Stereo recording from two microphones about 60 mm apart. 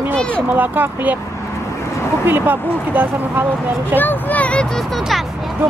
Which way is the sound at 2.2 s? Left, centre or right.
Right.